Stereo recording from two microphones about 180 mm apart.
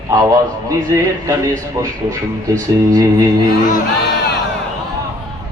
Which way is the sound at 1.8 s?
20° right (ahead or behind).